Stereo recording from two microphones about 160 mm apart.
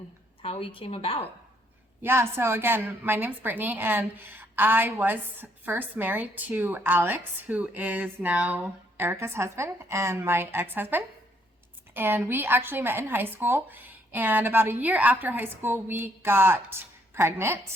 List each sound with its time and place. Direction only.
0.4 s speech: 35° left (ahead or behind)
2.0 s a woman's voice: 15° right (ahead or behind)